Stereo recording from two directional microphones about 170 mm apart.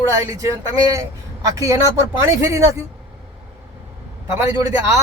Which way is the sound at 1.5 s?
20° right (ahead or behind).